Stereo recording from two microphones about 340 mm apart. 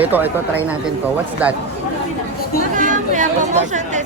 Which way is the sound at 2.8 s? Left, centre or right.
Right.